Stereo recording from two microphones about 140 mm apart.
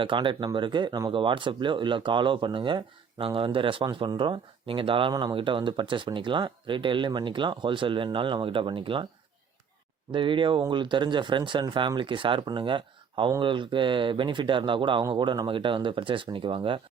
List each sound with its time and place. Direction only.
0.0 s speech: 35° right (ahead or behind)
10.1 s speech: 35° right (ahead or behind)